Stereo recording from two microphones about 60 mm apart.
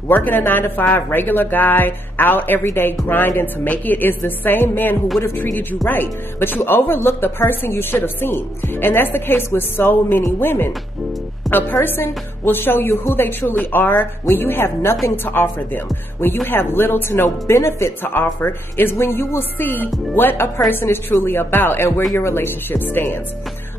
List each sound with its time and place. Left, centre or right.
0.1 s a woman's voice: left
11.4 s music: centre
11.8 s a woman's voice: left
18.0 s a woman's voice: left